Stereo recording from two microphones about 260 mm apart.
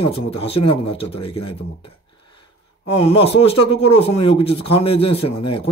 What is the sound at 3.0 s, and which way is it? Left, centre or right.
Speech, left.